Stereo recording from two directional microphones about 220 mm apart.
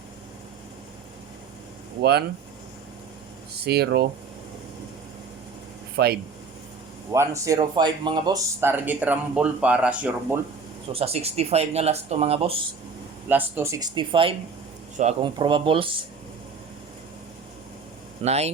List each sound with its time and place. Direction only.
2.0 s speech: 45° right (ahead or behind)
3.5 s speech: 45° right (ahead or behind)
6.0 s speech: 50° right (ahead or behind)
7.1 s speech: 15° right (ahead or behind)
8.6 s speech: 10° right (ahead or behind)
10.9 s speech: 25° right (ahead or behind)
13.2 s speech: 10° right (ahead or behind)
18.2 s speech: 30° right (ahead or behind)